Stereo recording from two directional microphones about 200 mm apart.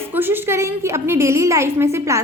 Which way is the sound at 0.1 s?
10° right (ahead or behind).